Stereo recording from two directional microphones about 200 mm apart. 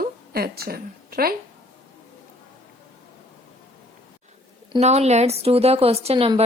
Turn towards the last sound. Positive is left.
turn(degrees=-30)  # may be behind; listen again after turning